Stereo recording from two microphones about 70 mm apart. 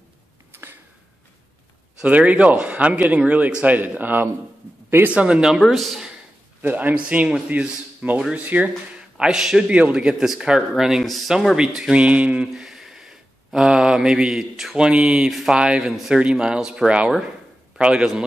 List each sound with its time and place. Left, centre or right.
0.5 s a sound: right
2.0 s speech: right
5.1 s a man's voice: centre
5.6 s speech: centre
6.6 s a man's voice: right
8.2 s a man's voice: centre
8.5 s speech: right
9.2 s a man's voice: centre